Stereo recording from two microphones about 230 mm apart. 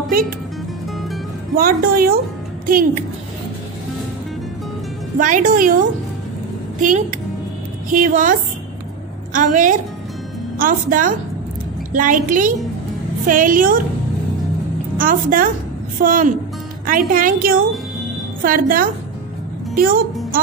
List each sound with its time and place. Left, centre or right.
1.5 s a woman's voice: right
5.2 s a woman's voice: right
7.9 s a woman's voice: right
15.0 s a woman's voice: right